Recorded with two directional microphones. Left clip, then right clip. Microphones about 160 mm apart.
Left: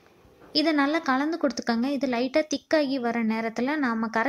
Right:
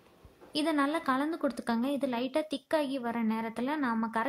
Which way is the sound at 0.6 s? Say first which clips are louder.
Left 6 dB; 20° left (ahead or behind).